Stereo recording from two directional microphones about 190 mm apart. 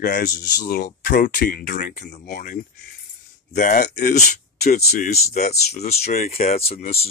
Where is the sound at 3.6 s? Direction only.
45° left (ahead or behind).